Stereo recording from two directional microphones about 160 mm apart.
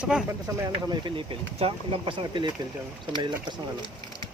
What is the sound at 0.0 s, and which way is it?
Speech, 5° right (ahead or behind).